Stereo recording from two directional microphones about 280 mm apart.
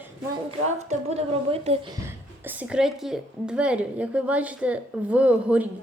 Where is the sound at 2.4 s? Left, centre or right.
Centre.